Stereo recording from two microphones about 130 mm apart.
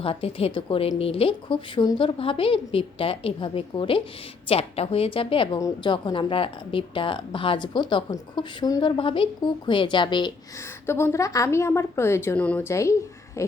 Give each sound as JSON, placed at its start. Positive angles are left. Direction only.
{"t": 0.0, "sound": "a woman's voice", "side_deg": 45}
{"t": 5.5, "sound": "a woman's voice", "side_deg": 25}
{"t": 5.9, "sound": "speech", "side_deg": 35}
{"t": 10.8, "sound": "a woman's voice", "side_deg": 20}
{"t": 12.7, "sound": "speech", "side_deg": 25}